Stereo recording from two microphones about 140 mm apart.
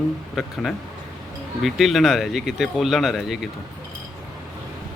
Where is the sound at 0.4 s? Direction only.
5° right (ahead or behind).